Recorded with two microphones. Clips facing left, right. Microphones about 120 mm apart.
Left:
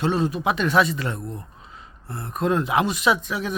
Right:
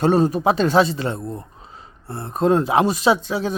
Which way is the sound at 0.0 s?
40° right (ahead or behind).